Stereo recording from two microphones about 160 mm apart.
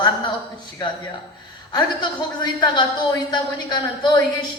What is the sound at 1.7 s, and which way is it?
A man's voice, 25° left (ahead or behind).